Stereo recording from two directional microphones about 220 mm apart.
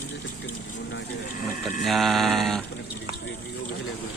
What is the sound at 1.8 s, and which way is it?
Mantra, centre (ahead or behind).